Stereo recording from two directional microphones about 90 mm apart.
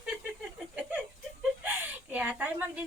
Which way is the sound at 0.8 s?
20° right (ahead or behind).